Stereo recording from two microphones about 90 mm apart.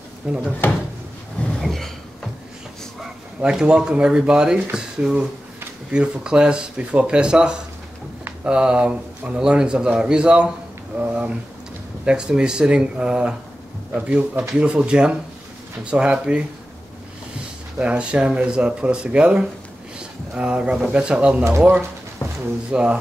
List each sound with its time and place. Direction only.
0.2 s speech: 15° right (ahead or behind)
0.6 s speech: 25° left (ahead or behind)
1.6 s a sound: centre (ahead or behind)
3.3 s speech: 10° right (ahead or behind)
17.7 s speech: 15° right (ahead or behind)
22.2 s a sound: 25° left (ahead or behind)
22.7 s speech: 10° right (ahead or behind)